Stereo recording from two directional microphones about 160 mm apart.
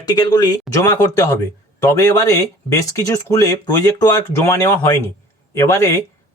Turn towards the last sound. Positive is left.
turn(degrees=20)  # may be behind; listen again after turning